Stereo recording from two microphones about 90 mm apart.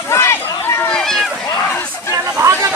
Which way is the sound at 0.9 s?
5° left (ahead or behind).